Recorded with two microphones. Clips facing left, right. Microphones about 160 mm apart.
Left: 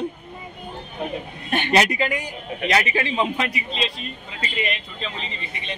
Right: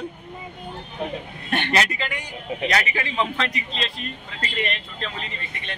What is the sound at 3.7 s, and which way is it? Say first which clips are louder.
Speech: left 2 dB; 5° left (ahead or behind).